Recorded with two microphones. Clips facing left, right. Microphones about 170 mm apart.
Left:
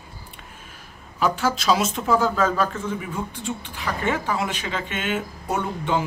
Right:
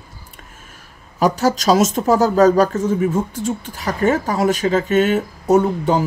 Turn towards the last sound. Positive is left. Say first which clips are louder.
# right 9 dB
turn(degrees=-40)  # may be behind; listen again after turning